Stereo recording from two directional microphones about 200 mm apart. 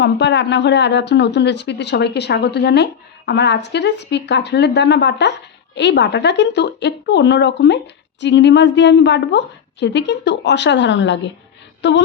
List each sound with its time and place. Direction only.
0.0 s speech: 60° left (ahead or behind)